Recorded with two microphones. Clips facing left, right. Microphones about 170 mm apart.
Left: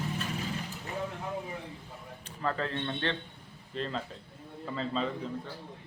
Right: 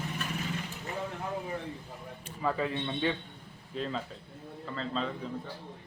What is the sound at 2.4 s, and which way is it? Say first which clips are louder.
A man's voice: right 1 dB; 10° right (ahead or behind).